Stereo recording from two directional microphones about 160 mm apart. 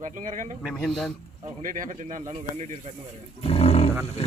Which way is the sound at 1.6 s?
55° right (ahead or behind).